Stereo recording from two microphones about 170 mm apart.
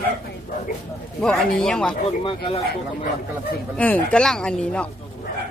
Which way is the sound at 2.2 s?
30° left (ahead or behind).